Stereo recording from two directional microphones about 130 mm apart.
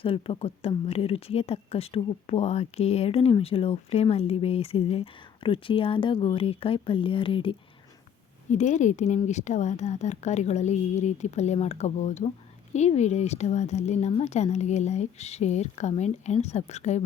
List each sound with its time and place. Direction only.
0.0 s speech: 45° left (ahead or behind)
8.4 s speech: 65° left (ahead or behind)